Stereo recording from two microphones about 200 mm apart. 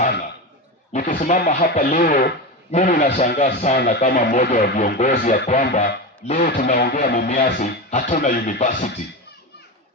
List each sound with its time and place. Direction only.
0.9 s speech: 40° left (ahead or behind)